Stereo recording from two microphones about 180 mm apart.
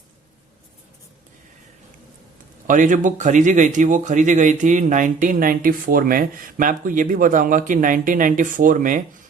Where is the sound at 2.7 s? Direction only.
45° right (ahead or behind).